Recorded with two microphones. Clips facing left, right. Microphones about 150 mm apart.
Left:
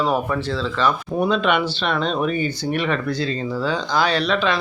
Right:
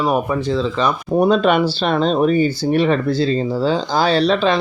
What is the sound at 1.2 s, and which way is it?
Speech, 40° right (ahead or behind).